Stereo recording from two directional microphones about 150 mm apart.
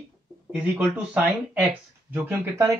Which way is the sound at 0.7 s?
10° right (ahead or behind).